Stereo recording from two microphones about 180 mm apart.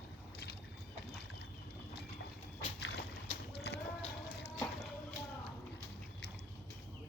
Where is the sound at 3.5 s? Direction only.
65° left (ahead or behind).